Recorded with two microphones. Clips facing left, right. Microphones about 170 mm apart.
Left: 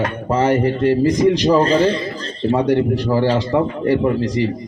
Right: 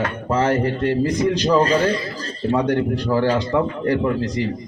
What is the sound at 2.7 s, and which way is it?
A man's voice, 10° left (ahead or behind).